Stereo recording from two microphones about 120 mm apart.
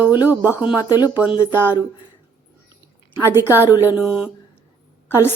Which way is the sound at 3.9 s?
5° right (ahead or behind).